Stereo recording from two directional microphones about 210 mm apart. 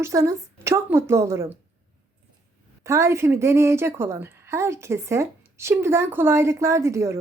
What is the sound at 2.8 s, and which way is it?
Speech, 15° right (ahead or behind).